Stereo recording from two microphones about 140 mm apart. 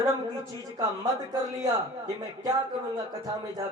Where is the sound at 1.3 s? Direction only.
25° right (ahead or behind).